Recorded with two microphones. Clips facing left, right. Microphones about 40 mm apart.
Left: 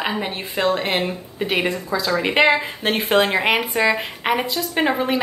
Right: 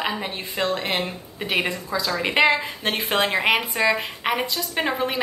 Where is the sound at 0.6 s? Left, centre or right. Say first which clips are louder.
Left 4 dB; left.